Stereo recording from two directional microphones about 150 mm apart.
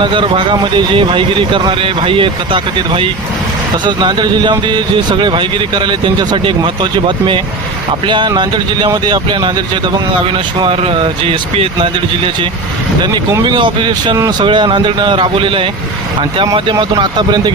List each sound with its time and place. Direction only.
0.0 s speech: 35° right (ahead or behind)